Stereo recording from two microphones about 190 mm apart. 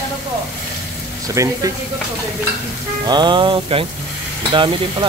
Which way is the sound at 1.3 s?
15° right (ahead or behind).